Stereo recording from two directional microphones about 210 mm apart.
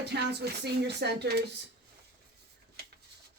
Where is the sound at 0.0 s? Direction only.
50° right (ahead or behind).